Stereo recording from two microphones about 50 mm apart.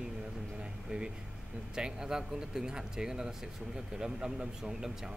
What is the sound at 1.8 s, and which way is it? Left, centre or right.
Speech, centre.